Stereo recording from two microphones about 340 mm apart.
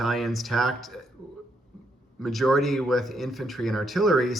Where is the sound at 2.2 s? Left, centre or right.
Centre.